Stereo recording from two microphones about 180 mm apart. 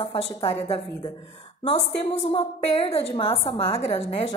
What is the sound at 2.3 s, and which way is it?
A woman's voice, 35° left (ahead or behind).